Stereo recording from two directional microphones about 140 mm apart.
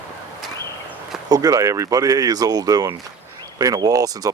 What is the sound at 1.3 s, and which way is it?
Speech, 25° right (ahead or behind).